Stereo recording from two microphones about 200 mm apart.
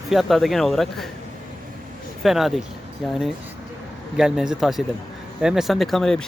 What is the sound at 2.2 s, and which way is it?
Speech, centre (ahead or behind).